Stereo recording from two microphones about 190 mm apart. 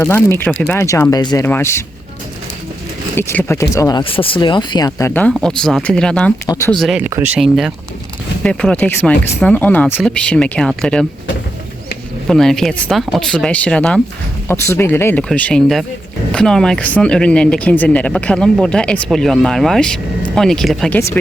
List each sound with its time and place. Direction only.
0.0 s speech: 10° left (ahead or behind)
3.2 s speech: 10° left (ahead or behind)
12.3 s speech: centre (ahead or behind)